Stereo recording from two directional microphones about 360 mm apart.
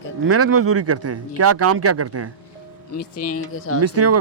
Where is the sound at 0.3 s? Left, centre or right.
Right.